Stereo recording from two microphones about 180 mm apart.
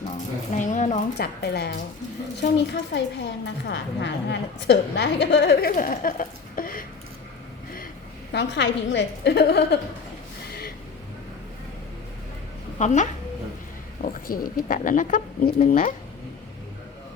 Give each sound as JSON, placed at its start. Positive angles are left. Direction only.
{"t": 0.5, "sound": "speech", "side_deg": 45}
{"t": 1.2, "sound": "a woman's voice", "side_deg": 65}
{"t": 8.3, "sound": "a woman's voice", "side_deg": 70}
{"t": 12.8, "sound": "speech", "side_deg": 40}
{"t": 14.0, "sound": "speech", "side_deg": 50}